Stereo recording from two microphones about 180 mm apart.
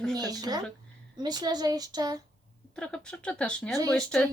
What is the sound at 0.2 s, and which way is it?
A woman's voice, 20° right (ahead or behind).